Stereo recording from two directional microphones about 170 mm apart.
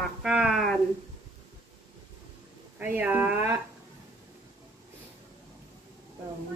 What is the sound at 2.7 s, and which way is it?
Speech, 10° right (ahead or behind).